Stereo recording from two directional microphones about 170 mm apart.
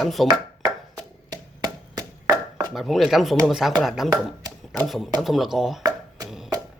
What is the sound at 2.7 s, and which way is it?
Speech, centre (ahead or behind).